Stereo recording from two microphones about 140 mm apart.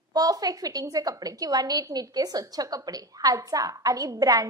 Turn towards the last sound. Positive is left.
turn(degrees=-25)  # may be behind; listen again after turning